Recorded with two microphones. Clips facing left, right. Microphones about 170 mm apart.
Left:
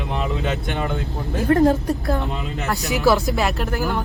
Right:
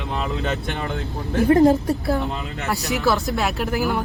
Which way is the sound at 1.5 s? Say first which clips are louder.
Right 1 dB; 10° right (ahead or behind).